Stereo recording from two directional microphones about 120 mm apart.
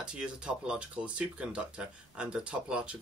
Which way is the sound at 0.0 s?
5° right (ahead or behind).